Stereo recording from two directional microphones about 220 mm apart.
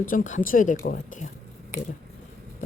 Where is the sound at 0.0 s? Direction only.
35° left (ahead or behind).